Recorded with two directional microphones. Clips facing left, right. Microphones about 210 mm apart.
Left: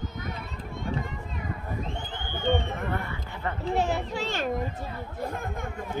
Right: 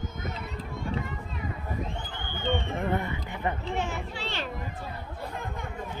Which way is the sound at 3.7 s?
35° left (ahead or behind).